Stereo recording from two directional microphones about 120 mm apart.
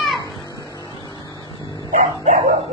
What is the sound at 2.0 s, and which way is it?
Dog, 90° right.